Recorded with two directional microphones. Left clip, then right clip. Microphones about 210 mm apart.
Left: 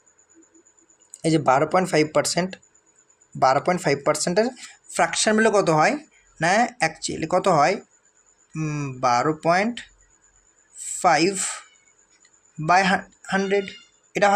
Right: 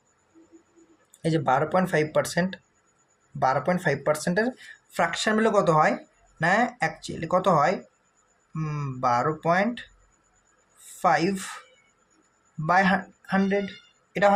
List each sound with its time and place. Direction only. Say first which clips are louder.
1.2 s speech: left 4 dB; 25° left (ahead or behind)
11.0 s speech: left 4 dB; 25° left (ahead or behind)
12.6 s speech: left 3 dB; 25° left (ahead or behind)